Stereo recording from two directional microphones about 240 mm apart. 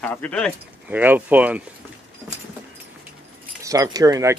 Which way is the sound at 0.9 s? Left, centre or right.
Centre.